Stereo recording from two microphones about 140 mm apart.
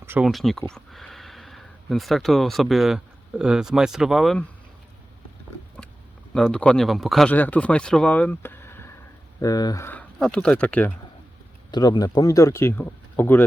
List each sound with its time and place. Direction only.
0.0 s a sound: 15° right (ahead or behind)
0.3 s speech: centre (ahead or behind)
6.3 s speech: 5° left (ahead or behind)
7.3 s speech: 10° left (ahead or behind)
11.7 s speech: 30° left (ahead or behind)